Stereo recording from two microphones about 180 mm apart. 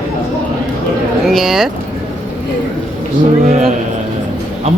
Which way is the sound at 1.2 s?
Centre (ahead or behind).